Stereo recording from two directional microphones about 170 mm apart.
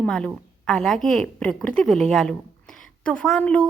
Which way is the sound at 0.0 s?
5° left (ahead or behind).